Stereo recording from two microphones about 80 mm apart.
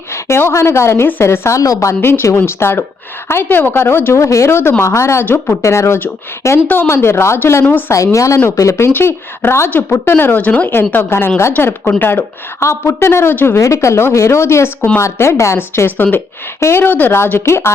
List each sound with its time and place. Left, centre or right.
0.1 s a woman's voice: left
2.0 s a woman's voice: left
5.2 s speech: left
5.6 s a woman's voice: left
7.9 s a woman's voice: left; by 10.7 s centre
10.9 s a woman's voice: left